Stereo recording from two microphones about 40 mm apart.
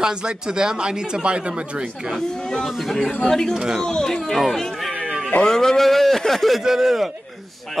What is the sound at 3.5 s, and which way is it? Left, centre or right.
Speech, centre.